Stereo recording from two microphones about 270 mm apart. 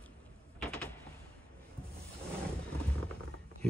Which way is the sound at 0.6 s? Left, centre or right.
Centre.